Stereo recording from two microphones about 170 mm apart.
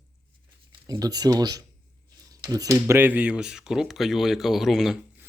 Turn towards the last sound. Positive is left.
turn(degrees=0)  # may be behind; listen again after turning